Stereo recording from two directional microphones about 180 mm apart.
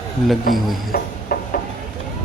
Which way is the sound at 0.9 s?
55° left (ahead or behind).